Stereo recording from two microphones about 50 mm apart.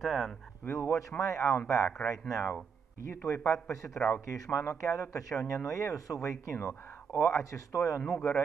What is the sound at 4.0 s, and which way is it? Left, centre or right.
Speech, centre.